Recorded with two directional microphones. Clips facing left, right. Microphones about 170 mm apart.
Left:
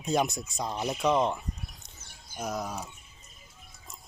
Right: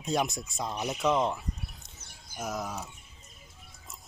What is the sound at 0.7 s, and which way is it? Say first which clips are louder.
Speech: left 2 dB; 20° left (ahead or behind).